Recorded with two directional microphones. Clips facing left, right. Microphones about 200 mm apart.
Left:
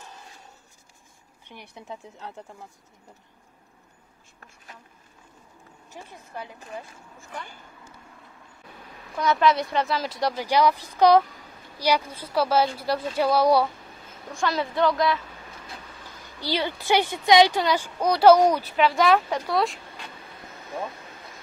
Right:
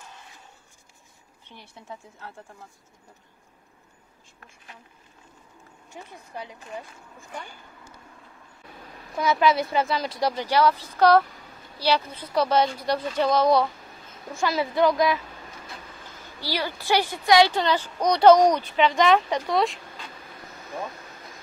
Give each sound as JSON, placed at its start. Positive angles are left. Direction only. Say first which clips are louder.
{"t": 1.4, "sound": "a woman's voice", "louder": "left 3 dB", "side_deg": 15}
{"t": 5.9, "sound": "a woman's voice", "louder": "right 1 dB", "side_deg": -15}
{"t": 9.2, "sound": "speech", "louder": "even", "side_deg": 0}
{"t": 10.4, "sound": "a woman's voice", "louder": "left 1 dB", "side_deg": 15}
{"t": 14.3, "sound": "a woman's voice", "louder": "right 1 dB", "side_deg": -5}
{"t": 16.3, "sound": "a woman's voice", "louder": "left 2 dB", "side_deg": 20}